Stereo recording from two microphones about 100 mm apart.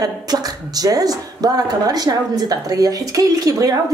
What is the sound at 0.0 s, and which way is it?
A woman's voice, 40° right (ahead or behind).